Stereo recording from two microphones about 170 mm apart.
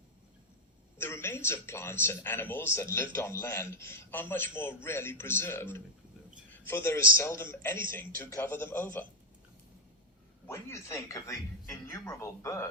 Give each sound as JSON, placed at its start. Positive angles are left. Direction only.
{"t": 0.9, "sound": "a man's voice", "side_deg": 15}
{"t": 10.4, "sound": "a man's voice", "side_deg": 15}